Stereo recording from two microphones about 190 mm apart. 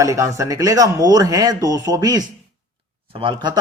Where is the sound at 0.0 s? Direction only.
15° right (ahead or behind).